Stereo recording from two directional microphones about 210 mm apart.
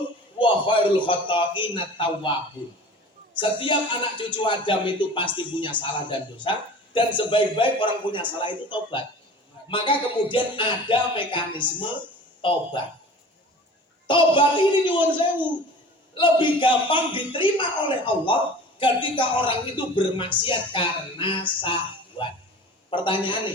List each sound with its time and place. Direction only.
0.3 s speech: 25° left (ahead or behind)
3.4 s speech: 25° left (ahead or behind)
14.1 s speech: 25° left (ahead or behind)